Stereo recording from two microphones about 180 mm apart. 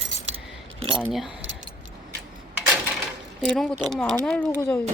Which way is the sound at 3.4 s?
5° left (ahead or behind).